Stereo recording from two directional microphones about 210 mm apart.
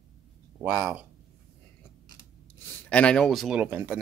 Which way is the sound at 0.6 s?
5° right (ahead or behind).